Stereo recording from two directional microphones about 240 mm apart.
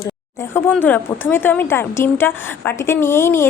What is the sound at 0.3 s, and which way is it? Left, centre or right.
Speech, centre.